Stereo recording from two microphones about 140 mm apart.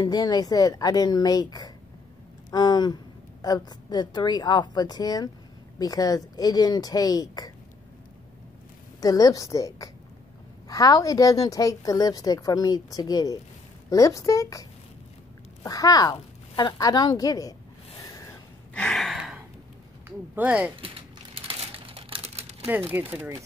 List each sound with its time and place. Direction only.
0.0 s a woman's voice: 30° left (ahead or behind)
9.0 s a woman's voice: 25° left (ahead or behind)
18.0 s a sound: 25° left (ahead or behind)
18.7 s gasp: 5° left (ahead or behind)
20.1 s speech: 10° right (ahead or behind)
21.4 s a sound: 40° right (ahead or behind)
22.9 s speech: 15° right (ahead or behind)